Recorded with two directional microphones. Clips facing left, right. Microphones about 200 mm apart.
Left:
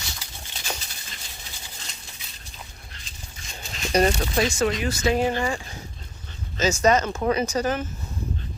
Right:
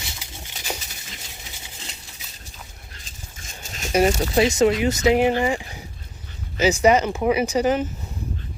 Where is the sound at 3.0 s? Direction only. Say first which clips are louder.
Right 2 dB; 45° right (ahead or behind).